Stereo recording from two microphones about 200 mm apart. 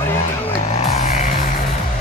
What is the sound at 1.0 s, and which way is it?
Music, 35° left (ahead or behind).